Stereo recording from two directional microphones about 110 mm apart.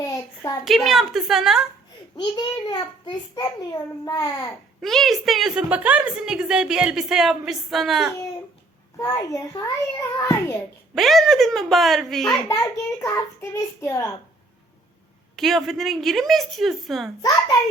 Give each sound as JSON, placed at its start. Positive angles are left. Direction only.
{"t": 0.0, "sound": "a sound", "side_deg": 30}
{"t": 0.6, "sound": "a woman's voice", "side_deg": 0}
{"t": 2.1, "sound": "a child's voice", "side_deg": 40}
{"t": 4.8, "sound": "a woman's voice", "side_deg": 0}
{"t": 5.6, "sound": "a woman's voice", "side_deg": -15}
{"t": 9.0, "sound": "a child's voice", "side_deg": 30}
{"t": 10.9, "sound": "a woman's voice", "side_deg": 0}
{"t": 12.5, "sound": "a child's voice", "side_deg": 25}
{"t": 15.4, "sound": "a woman's voice", "side_deg": 0}